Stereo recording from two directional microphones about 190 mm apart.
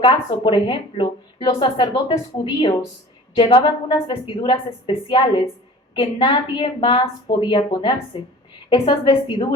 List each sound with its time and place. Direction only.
0.0 s speech: 25° left (ahead or behind)